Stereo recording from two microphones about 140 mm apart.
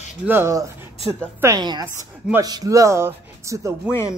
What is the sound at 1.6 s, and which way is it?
A woman's voice, 30° right (ahead or behind).